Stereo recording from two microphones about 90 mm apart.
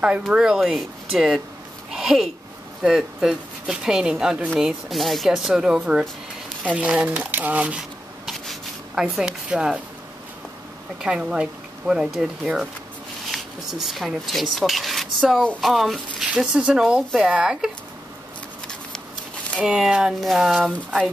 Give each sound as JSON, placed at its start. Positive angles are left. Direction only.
{"t": 0.3, "sound": "speech", "side_deg": -5}
{"t": 1.9, "sound": "a sound", "side_deg": -5}
{"t": 2.8, "sound": "speech", "side_deg": -5}
{"t": 8.3, "sound": "a sound", "side_deg": 0}
{"t": 9.1, "sound": "speech", "side_deg": -10}
{"t": 11.0, "sound": "speech", "side_deg": -10}
{"t": 19.6, "sound": "speech", "side_deg": -5}